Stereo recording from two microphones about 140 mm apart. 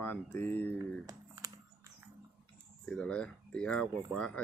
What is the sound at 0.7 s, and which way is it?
Computer keyboard, 25° right (ahead or behind).